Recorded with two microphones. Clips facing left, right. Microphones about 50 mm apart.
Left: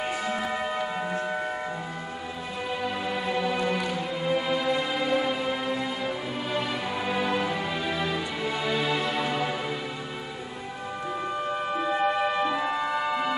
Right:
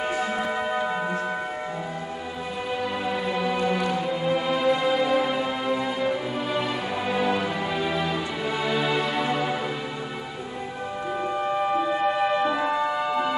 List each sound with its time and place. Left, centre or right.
0.0 s music: right
0.4 s music: centre
2.8 s music: centre
11.4 s music: centre